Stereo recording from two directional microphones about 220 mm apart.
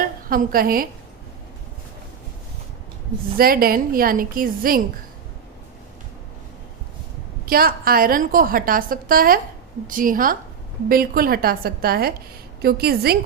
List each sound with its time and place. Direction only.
0.3 s a woman's voice: 40° right (ahead or behind)
3.3 s a woman's voice: 40° right (ahead or behind)
7.4 s a woman's voice: 40° right (ahead or behind)